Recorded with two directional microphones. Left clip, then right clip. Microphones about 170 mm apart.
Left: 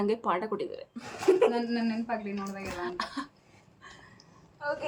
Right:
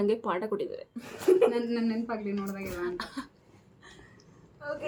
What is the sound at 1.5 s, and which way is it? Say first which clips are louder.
A woman's voice: right 1 dB; 10° right (ahead or behind).